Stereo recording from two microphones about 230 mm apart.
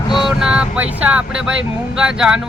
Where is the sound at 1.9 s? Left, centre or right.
Centre.